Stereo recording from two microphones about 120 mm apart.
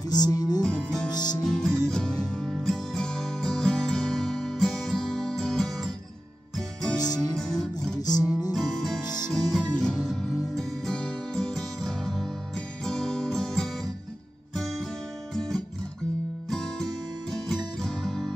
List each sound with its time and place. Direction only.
0.1 s music: 35° left (ahead or behind)
0.6 s music: 10° left (ahead or behind)
1.1 s music: 35° left (ahead or behind)
1.4 s music: 5° left (ahead or behind)
7.0 s music: 30° left (ahead or behind)
7.3 s music: 5° left (ahead or behind)
8.2 s music: 30° left (ahead or behind)
8.5 s music: centre (ahead or behind)